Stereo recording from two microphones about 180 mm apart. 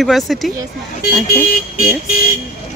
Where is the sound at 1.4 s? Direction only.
50° left (ahead or behind).